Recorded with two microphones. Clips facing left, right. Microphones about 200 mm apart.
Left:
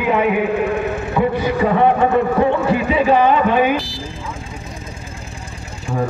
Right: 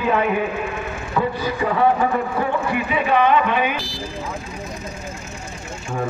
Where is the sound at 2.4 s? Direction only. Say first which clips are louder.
Left 6 dB; 25° left (ahead or behind).